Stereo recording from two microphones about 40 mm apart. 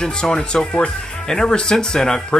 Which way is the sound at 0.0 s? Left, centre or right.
Left.